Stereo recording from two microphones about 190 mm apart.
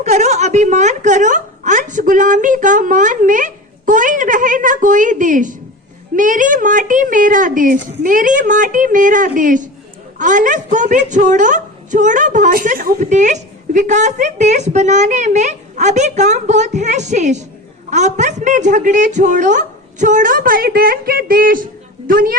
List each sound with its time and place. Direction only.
0.0 s a woman's voice: 35° right (ahead or behind)